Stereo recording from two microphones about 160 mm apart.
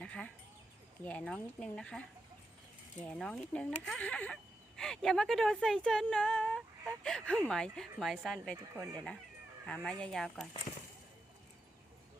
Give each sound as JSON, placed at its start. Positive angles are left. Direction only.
{"t": 0.0, "sound": "chicken", "side_deg": 5}
{"t": 1.0, "sound": "speech", "side_deg": 5}
{"t": 8.7, "sound": "speech", "side_deg": -20}
{"t": 9.6, "sound": "speech", "side_deg": 5}